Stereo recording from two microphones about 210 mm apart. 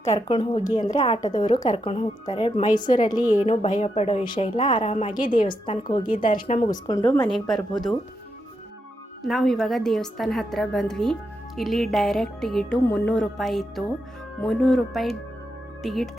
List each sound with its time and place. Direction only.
0.0 s speech: 30° left (ahead or behind)
6.1 s speech: 40° left (ahead or behind)
6.6 s speech: 20° left (ahead or behind)
7.2 s a woman's voice: centre (ahead or behind)
9.2 s a woman's voice: centre (ahead or behind)